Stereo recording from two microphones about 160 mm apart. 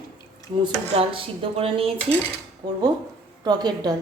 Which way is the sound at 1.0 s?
35° right (ahead or behind).